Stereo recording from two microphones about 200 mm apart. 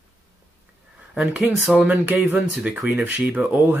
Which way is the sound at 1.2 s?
5° right (ahead or behind).